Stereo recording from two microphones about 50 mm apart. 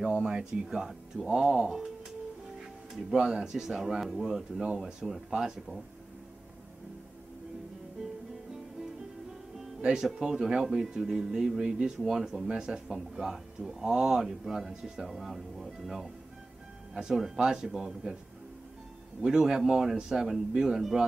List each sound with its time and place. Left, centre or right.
0.0 s speech: centre
2.9 s speech: centre
9.8 s speech: centre
19.2 s speech: centre